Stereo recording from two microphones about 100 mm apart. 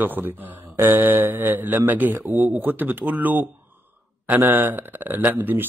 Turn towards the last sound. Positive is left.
turn(degrees=-20)  # may be behind; listen again after turning